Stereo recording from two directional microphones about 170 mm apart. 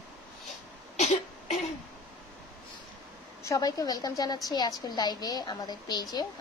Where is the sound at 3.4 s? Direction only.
20° left (ahead or behind).